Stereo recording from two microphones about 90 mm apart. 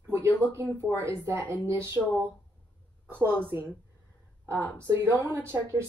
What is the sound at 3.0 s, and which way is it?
Speech, 25° right (ahead or behind).